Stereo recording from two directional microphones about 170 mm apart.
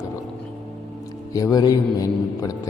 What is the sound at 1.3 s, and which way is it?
A man's voice, 20° left (ahead or behind).